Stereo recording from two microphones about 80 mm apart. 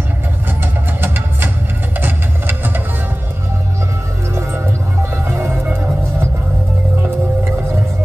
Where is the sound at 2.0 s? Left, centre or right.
Right.